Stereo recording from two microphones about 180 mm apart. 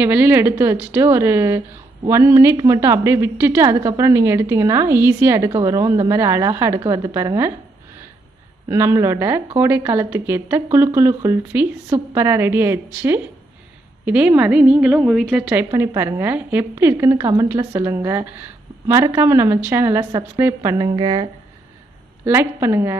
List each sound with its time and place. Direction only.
0.0 s a woman's voice: 10° right (ahead or behind)
8.6 s a woman's voice: 15° right (ahead or behind)
22.2 s a woman's voice: 15° right (ahead or behind)